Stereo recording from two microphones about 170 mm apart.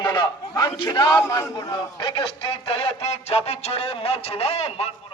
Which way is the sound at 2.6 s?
35° left (ahead or behind).